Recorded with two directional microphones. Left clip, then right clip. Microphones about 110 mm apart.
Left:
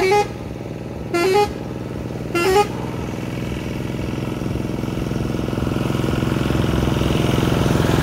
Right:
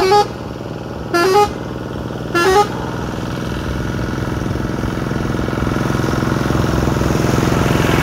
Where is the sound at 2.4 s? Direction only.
Centre (ahead or behind).